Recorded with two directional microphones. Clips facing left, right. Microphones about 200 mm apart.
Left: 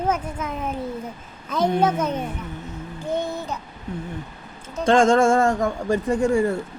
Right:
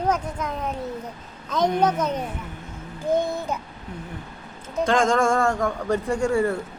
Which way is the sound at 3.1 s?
15° right (ahead or behind).